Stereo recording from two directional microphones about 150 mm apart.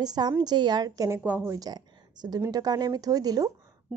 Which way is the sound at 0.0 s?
25° right (ahead or behind).